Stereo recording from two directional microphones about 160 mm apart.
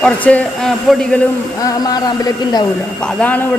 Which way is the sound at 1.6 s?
25° left (ahead or behind).